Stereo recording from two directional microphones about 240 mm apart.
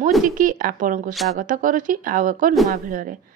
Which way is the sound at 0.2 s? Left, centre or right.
Right.